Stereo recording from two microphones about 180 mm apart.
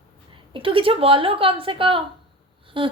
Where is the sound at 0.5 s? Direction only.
30° right (ahead or behind).